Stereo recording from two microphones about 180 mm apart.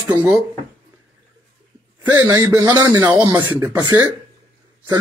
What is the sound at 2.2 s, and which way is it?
A man's voice, 20° right (ahead or behind).